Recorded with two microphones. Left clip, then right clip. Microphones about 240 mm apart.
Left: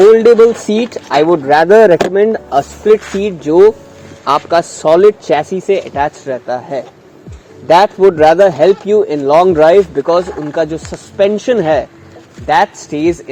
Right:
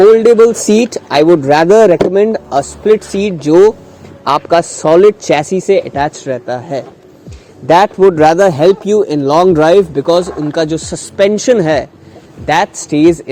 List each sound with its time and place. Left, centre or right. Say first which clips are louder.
0.0 s a man's voice: even; right